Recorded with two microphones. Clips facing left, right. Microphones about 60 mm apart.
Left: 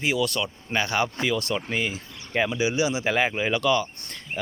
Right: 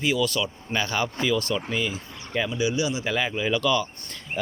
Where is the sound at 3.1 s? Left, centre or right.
Left.